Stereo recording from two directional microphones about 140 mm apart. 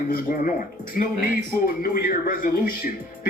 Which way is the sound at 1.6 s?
85° left.